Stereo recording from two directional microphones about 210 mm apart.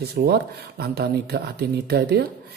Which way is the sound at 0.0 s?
50° right (ahead or behind).